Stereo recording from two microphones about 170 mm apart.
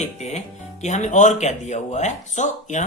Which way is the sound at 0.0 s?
40° left (ahead or behind).